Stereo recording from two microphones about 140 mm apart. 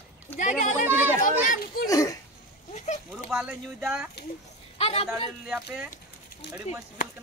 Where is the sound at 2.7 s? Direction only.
55° left (ahead or behind).